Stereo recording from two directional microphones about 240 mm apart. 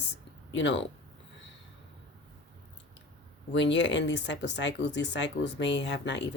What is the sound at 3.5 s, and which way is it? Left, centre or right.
Speech, left.